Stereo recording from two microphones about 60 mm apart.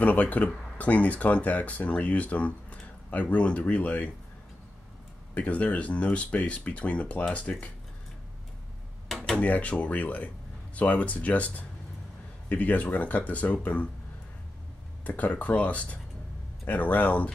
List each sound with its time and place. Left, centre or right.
0.0 s speech: left
5.3 s speech: left
9.1 s a sound: centre
9.4 s speech: left
15.0 s speech: left